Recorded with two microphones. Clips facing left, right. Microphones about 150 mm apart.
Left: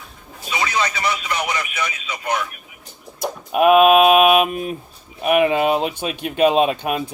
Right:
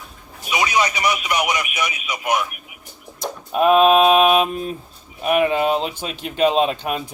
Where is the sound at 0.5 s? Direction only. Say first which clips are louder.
Right 2 dB; 15° right (ahead or behind).